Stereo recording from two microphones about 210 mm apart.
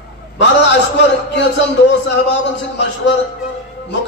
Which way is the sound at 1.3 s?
55° left (ahead or behind).